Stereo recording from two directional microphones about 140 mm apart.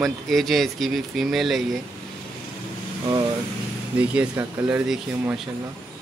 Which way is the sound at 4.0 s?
10° right (ahead or behind).